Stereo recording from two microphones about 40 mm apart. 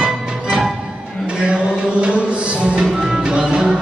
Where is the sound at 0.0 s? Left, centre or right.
Centre.